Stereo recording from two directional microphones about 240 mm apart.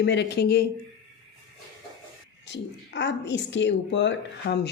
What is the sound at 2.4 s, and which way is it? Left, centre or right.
Speech, left.